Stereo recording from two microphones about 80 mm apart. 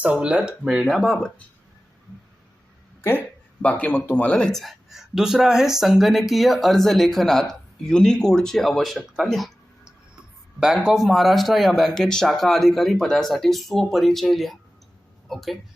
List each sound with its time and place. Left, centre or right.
0.0 s speech: centre
0.8 s speech: centre
3.6 s speech: centre
4.6 s speech: centre